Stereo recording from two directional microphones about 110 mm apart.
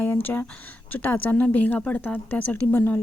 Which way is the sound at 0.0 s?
15° left (ahead or behind).